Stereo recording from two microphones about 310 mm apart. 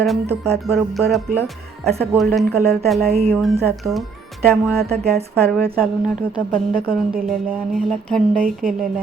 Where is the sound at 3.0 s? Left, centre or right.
Centre.